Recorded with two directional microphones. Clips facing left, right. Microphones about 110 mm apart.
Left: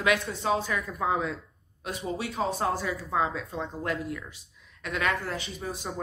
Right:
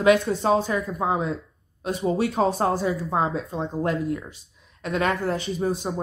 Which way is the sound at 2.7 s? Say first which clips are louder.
Right 5 dB; 30° right (ahead or behind).